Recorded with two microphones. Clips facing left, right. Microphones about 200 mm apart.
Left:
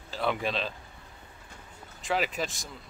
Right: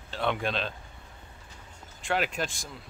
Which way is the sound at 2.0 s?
Centre (ahead or behind).